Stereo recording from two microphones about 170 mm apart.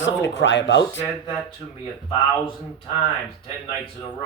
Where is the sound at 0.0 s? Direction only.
90° left.